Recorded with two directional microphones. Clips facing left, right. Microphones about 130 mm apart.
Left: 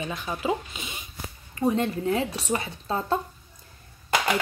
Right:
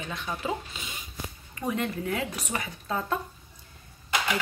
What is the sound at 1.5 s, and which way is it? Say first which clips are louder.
A woman's voice: left 6 dB; 30° left (ahead or behind).